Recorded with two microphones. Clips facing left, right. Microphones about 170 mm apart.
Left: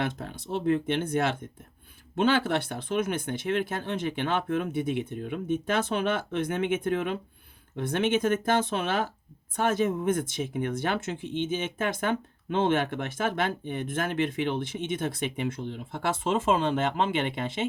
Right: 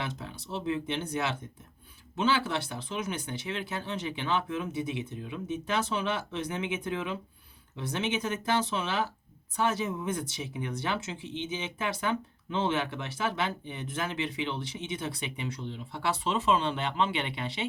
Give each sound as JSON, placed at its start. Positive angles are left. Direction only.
{"t": 0.0, "sound": "speech", "side_deg": 55}